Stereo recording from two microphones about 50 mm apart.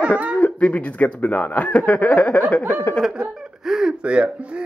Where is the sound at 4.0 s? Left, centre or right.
Right.